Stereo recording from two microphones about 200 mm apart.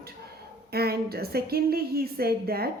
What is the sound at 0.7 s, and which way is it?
Speech, 50° right (ahead or behind).